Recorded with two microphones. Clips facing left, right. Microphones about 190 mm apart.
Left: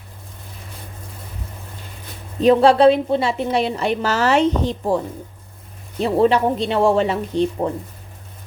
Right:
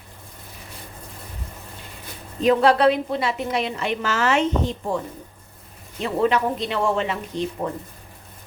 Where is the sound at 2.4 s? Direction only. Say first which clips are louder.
Left 5 dB; 30° left (ahead or behind).